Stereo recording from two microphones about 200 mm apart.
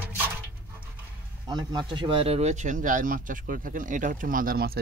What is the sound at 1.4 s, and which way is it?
Speech, 20° right (ahead or behind).